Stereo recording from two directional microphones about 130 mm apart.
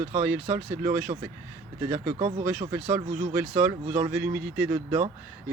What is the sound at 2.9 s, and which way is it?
Speech, 15° right (ahead or behind).